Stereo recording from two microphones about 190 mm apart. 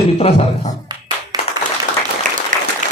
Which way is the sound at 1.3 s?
20° right (ahead or behind).